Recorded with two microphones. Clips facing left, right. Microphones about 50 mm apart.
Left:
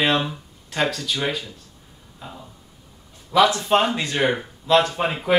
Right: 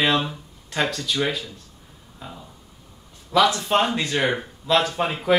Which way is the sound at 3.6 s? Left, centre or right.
Centre.